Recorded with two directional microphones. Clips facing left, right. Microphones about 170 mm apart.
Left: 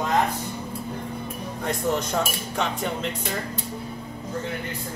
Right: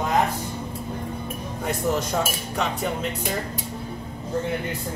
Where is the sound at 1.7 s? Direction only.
5° right (ahead or behind).